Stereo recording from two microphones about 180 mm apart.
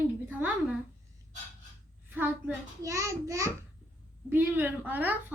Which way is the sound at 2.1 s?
10° right (ahead or behind).